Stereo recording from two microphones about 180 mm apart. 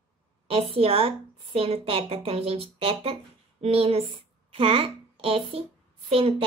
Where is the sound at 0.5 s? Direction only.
35° right (ahead or behind).